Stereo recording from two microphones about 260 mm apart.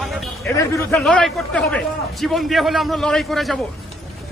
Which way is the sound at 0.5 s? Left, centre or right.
Centre.